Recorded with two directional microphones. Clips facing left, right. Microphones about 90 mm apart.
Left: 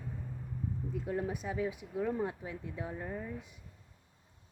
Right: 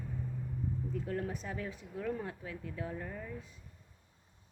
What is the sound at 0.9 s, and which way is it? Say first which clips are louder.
Speech: left 4 dB; 15° left (ahead or behind).